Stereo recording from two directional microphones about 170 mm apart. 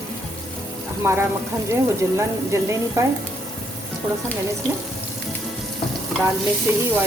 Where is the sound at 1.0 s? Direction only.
15° right (ahead or behind).